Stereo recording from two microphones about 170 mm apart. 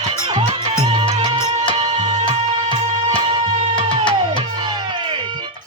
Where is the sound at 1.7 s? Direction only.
40° right (ahead or behind).